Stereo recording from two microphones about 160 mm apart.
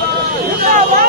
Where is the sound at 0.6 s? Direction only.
60° right (ahead or behind).